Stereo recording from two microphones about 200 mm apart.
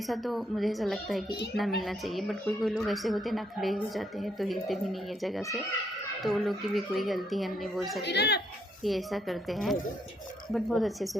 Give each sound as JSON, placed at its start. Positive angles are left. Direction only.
{"t": 0.1, "sound": "a woman's voice", "side_deg": 0}
{"t": 8.0, "sound": "speech", "side_deg": 55}
{"t": 8.8, "sound": "a woman's voice", "side_deg": 0}